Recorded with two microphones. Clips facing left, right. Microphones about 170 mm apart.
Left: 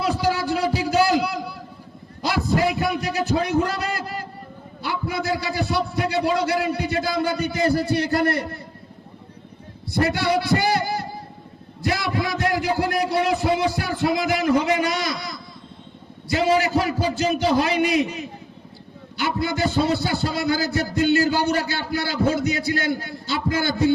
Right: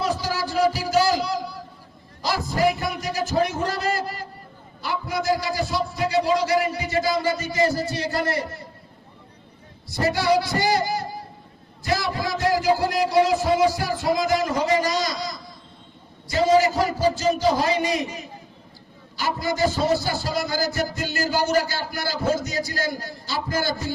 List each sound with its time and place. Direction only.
0.0 s a sound: 60° left (ahead or behind)
2.2 s a man's voice: 65° left (ahead or behind)
9.9 s a man's voice: 60° left (ahead or behind)